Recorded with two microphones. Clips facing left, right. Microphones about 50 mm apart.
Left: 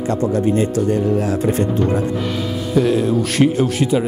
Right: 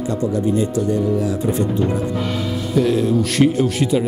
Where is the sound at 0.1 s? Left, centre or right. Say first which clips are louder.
Left 2 dB; left.